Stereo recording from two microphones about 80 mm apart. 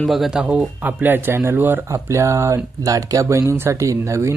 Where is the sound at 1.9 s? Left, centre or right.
Right.